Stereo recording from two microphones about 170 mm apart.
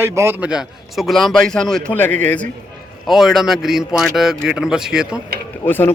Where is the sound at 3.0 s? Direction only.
Centre (ahead or behind).